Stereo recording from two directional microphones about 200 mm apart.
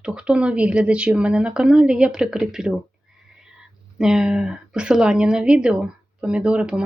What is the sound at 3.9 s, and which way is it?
A woman's voice, 5° right (ahead or behind).